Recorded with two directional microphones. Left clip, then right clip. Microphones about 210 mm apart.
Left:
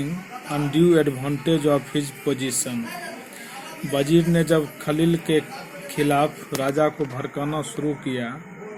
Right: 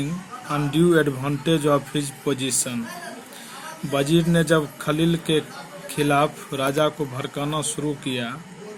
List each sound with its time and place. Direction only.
0.5 s speech: 30° right (ahead or behind)
3.9 s speech: 30° right (ahead or behind)